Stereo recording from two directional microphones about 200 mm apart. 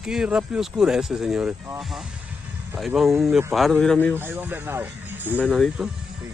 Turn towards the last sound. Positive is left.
turn(degrees=0)  # may be behind; listen again after turning